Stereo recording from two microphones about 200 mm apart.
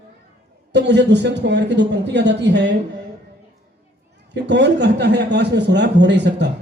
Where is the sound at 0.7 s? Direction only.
60° right (ahead or behind).